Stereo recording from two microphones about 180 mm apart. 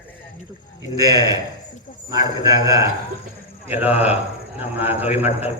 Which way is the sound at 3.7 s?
10° right (ahead or behind).